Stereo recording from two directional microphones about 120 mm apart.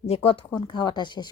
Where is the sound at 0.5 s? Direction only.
35° left (ahead or behind).